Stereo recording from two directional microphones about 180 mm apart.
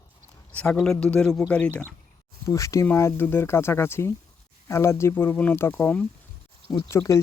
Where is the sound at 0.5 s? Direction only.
5° left (ahead or behind).